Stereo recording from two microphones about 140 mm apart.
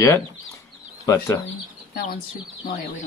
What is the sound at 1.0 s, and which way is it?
Speech, 25° left (ahead or behind).